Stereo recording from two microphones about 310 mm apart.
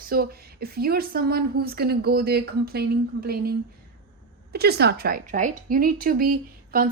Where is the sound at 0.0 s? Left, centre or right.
Right.